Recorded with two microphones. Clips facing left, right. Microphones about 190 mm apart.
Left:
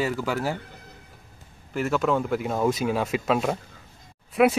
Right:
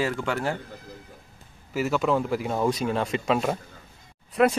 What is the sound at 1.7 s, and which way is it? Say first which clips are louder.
Speech: even; centre (ahead or behind).